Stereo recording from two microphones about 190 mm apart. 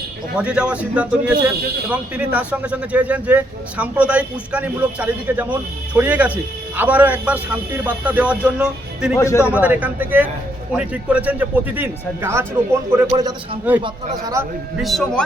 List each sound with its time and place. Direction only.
0.3 s a man's voice: 5° right (ahead or behind)
9.1 s a man's voice: 15° left (ahead or behind)
9.4 s speech: 5° right (ahead or behind)
14.8 s a man's voice: centre (ahead or behind)